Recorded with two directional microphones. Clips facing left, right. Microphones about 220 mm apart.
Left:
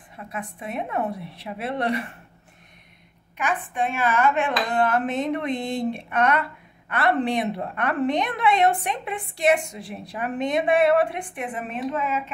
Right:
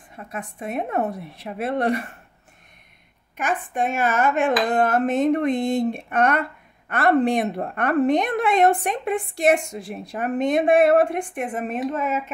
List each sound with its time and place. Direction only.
0.1 s a woman's voice: 45° right (ahead or behind)
3.3 s a woman's voice: 45° right (ahead or behind)